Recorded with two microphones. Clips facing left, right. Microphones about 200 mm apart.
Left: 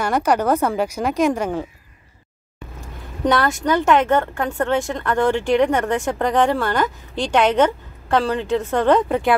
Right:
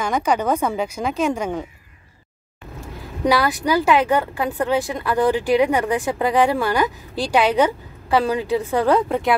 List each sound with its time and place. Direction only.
0.0 s a woman's voice: 10° left (ahead or behind)
3.3 s a woman's voice: 5° right (ahead or behind)